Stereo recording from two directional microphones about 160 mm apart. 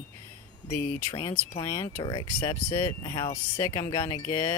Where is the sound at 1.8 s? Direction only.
20° left (ahead or behind).